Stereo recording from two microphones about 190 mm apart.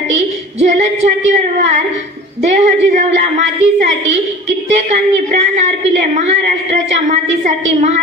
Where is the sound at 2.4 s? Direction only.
40° right (ahead or behind).